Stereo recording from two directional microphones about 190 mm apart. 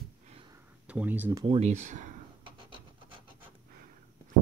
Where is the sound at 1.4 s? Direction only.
35° right (ahead or behind).